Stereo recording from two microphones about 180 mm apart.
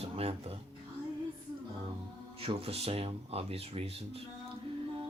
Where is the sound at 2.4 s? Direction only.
35° right (ahead or behind).